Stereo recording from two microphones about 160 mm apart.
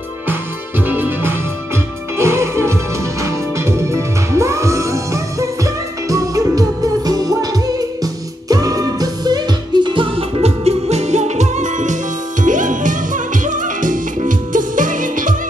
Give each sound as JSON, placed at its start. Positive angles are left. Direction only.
{"t": 0.3, "sound": "music", "side_deg": -15}